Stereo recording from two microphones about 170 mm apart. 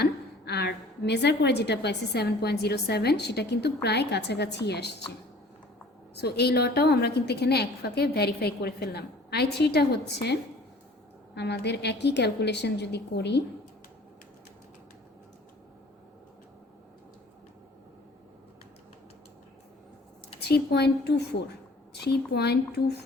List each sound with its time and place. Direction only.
0.0 s a woman's voice: 75° left (ahead or behind)
6.1 s a woman's voice: 75° left (ahead or behind)
11.3 s a woman's voice: 85° left
20.5 s a woman's voice: 75° left (ahead or behind)